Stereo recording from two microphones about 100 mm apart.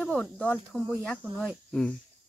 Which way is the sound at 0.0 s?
10° left (ahead or behind).